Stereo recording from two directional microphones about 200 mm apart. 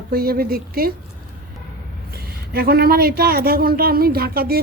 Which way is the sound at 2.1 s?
50° right (ahead or behind).